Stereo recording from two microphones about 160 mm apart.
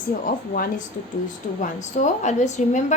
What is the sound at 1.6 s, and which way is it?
A woman's voice, 50° left (ahead or behind).